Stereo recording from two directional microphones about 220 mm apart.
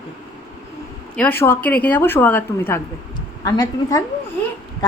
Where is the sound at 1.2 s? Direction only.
10° left (ahead or behind).